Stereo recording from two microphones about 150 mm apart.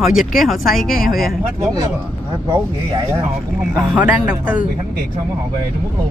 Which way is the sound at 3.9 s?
10° right (ahead or behind).